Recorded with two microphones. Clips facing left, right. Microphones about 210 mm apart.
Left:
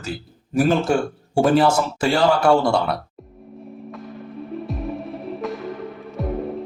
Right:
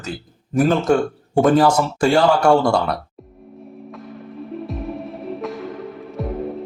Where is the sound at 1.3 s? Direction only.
10° left (ahead or behind).